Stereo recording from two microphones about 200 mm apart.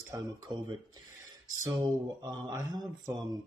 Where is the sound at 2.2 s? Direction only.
15° right (ahead or behind).